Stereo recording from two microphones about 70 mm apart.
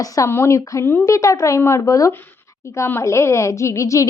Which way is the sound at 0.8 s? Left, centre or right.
Left.